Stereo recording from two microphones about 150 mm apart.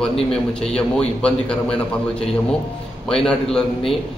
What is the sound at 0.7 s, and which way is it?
A man's voice, 5° left (ahead or behind).